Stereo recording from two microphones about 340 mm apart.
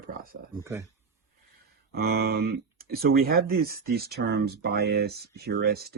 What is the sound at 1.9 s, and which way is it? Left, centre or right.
Speech, right.